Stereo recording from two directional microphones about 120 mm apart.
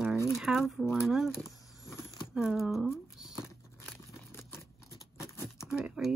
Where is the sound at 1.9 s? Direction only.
25° left (ahead or behind).